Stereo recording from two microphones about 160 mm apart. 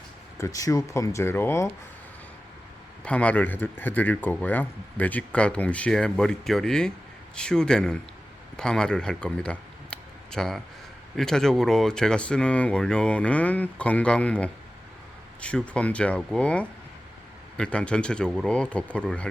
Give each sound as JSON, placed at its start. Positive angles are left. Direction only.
{"t": 0.3, "sound": "speech", "side_deg": 20}
{"t": 3.0, "sound": "a man's voice", "side_deg": 10}